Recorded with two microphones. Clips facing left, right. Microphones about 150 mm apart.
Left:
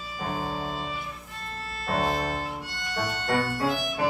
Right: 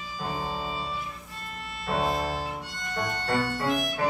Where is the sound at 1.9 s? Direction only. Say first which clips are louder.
Even; centre (ahead or behind).